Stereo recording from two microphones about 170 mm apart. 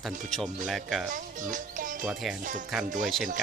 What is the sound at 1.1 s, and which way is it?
Speech, 50° right (ahead or behind).